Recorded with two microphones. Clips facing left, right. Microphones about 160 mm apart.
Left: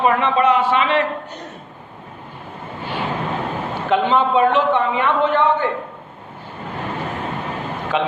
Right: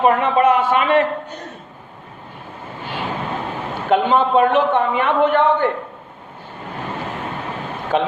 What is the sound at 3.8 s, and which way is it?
A woman's voice, 45° right (ahead or behind).